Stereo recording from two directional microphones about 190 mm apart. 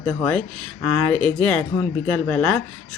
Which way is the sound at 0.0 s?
10° left (ahead or behind).